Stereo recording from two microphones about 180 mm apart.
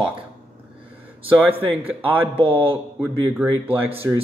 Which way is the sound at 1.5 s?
10° right (ahead or behind).